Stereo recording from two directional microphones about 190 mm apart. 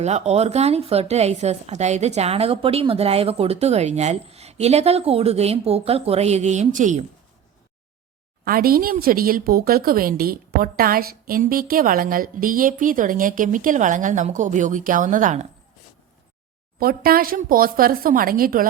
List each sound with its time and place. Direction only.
0.0 s a woman's voice: 35° right (ahead or behind)
8.4 s a woman's voice: 50° right (ahead or behind)
16.8 s a woman's voice: 50° right (ahead or behind)